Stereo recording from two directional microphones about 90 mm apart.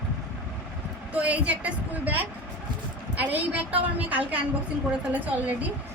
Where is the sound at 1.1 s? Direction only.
15° right (ahead or behind).